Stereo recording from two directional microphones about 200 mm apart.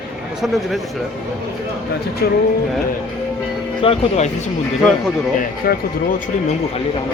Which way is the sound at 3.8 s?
30° left (ahead or behind).